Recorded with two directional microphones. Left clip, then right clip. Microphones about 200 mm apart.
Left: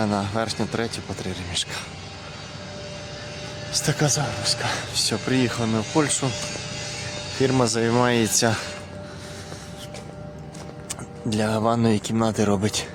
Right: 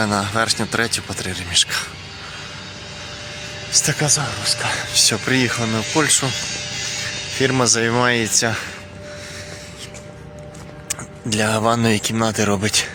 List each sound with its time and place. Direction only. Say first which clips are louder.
0.0 s speech: right 6 dB; centre (ahead or behind)
3.7 s speech: right 5 dB; 5° left (ahead or behind)
6.3 s music: right 5 dB; 45° left (ahead or behind)
7.4 s speech: right 4 dB; 5° left (ahead or behind)
10.8 s speech: right 5 dB; 5° left (ahead or behind)